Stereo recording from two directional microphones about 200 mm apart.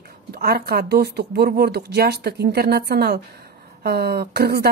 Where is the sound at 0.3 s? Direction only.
50° right (ahead or behind).